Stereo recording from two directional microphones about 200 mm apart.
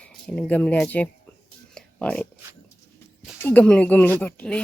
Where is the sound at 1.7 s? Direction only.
5° left (ahead or behind).